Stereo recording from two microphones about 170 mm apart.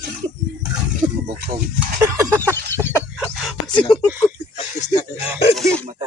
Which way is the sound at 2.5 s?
15° left (ahead or behind).